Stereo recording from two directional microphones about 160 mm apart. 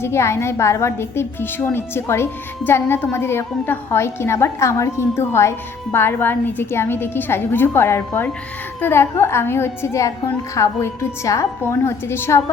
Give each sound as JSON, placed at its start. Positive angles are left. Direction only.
{"t": 0.0, "sound": "a woman's voice", "side_deg": 15}